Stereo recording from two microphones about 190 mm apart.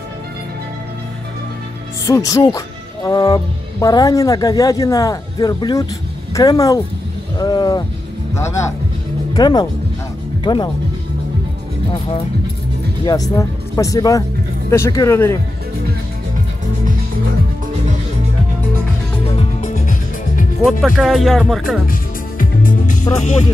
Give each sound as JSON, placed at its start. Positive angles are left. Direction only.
{"t": 2.0, "sound": "speech", "side_deg": 15}
{"t": 9.3, "sound": "speech", "side_deg": 20}
{"t": 13.0, "sound": "speech", "side_deg": 20}
{"t": 19.6, "sound": "music", "side_deg": 45}
{"t": 20.6, "sound": "speech", "side_deg": 0}
{"t": 22.4, "sound": "music", "side_deg": 45}